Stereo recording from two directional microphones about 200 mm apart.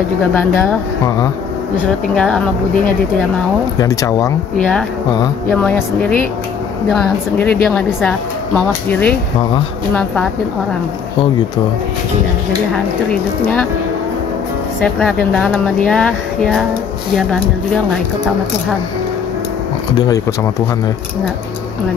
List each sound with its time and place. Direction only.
0.3 s speech: 10° left (ahead or behind)
2.1 s speech: 5° left (ahead or behind)
3.8 s speech: 15° left (ahead or behind)
4.6 s speech: 5° left (ahead or behind)
15.0 s speech: 5° left (ahead or behind)